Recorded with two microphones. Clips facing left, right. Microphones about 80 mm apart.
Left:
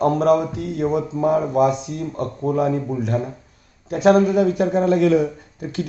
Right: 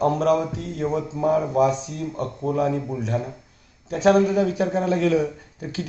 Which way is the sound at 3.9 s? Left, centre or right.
Centre.